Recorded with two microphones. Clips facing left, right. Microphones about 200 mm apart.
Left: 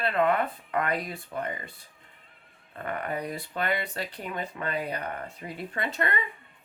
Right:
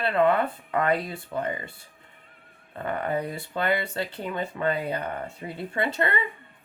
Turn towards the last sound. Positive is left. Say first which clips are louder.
# right 4 dB
turn(degrees=-30)  # may be behind; listen again after turning